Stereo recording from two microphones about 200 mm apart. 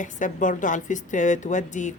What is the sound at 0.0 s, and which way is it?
Speech, 40° left (ahead or behind).